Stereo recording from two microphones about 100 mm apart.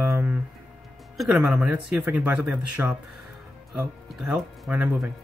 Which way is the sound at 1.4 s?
10° right (ahead or behind).